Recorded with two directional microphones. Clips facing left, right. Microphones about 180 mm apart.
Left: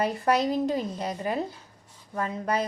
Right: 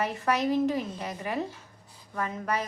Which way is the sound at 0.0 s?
35° left (ahead or behind).